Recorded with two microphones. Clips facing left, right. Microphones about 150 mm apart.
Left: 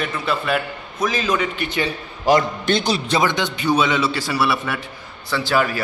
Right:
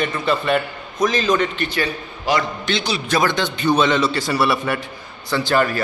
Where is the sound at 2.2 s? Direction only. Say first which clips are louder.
Left 4 dB; 45° left (ahead or behind).